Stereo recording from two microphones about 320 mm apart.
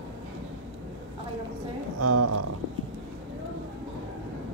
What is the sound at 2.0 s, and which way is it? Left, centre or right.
Speech, right.